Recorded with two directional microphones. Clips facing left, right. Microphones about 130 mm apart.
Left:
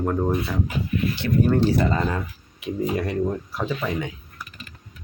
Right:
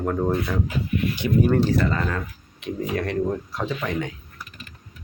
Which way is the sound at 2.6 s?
5° left (ahead or behind).